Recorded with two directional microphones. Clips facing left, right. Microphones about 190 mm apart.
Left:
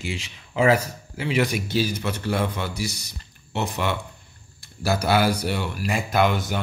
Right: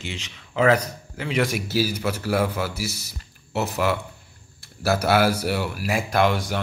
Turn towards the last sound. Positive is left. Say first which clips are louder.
# even
turn(degrees=0)  # may be behind; listen again after turning